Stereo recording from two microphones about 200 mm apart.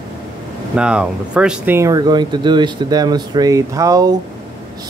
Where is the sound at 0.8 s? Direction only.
5° right (ahead or behind).